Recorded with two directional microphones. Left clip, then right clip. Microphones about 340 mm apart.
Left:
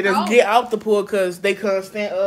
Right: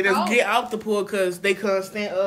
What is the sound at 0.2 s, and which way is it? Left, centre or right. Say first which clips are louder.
Speech: left 5 dB; centre.